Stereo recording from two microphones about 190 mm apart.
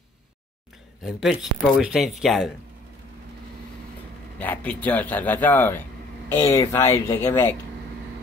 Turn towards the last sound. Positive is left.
turn(degrees=15)  # may be behind; listen again after turning